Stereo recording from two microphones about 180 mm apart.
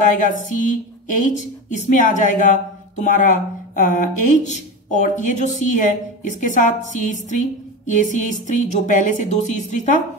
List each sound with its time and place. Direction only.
0.0 s speech: 45° left (ahead or behind)